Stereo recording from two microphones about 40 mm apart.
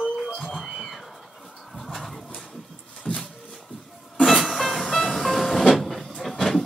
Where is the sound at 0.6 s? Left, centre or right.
Centre.